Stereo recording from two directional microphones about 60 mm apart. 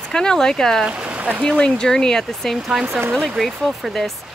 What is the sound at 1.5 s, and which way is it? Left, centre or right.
Speech, centre.